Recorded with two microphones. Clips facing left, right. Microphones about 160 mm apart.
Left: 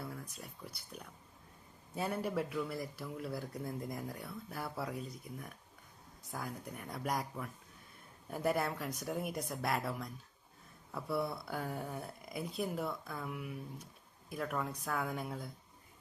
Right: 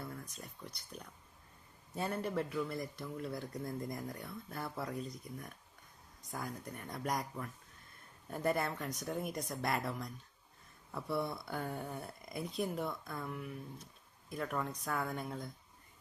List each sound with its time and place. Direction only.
0.0 s speech: 5° left (ahead or behind)